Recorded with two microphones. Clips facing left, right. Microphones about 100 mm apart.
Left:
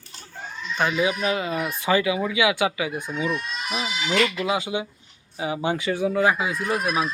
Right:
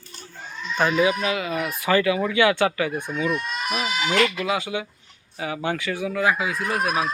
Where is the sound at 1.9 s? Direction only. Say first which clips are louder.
Right 2 dB; 15° left (ahead or behind).